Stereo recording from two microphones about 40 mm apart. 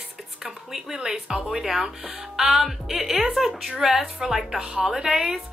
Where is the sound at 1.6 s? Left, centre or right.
Centre.